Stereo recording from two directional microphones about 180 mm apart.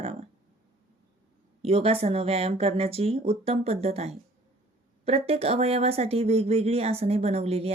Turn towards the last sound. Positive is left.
turn(degrees=-35)  # may be behind; listen again after turning